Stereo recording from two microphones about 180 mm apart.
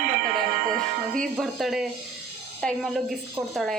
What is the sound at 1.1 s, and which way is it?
A woman's voice, centre (ahead or behind).